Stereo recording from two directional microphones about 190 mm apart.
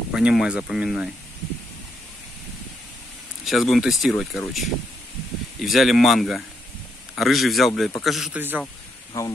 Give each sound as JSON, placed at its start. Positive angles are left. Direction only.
{"t": 0.1, "sound": "speech", "side_deg": -5}
{"t": 3.4, "sound": "speech", "side_deg": 0}
{"t": 9.1, "sound": "speech", "side_deg": 15}